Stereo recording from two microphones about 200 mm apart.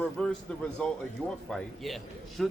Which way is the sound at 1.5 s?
Centre (ahead or behind).